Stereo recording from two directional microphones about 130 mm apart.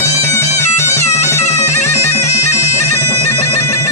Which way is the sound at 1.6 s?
20° left (ahead or behind).